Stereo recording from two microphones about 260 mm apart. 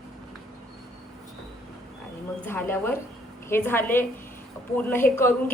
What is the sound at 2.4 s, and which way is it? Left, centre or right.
A woman's voice, centre.